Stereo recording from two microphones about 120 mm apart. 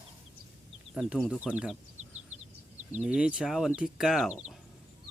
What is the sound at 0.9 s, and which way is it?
Speech, 5° right (ahead or behind).